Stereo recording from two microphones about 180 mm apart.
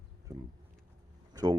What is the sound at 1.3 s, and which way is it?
Speech, 20° right (ahead or behind).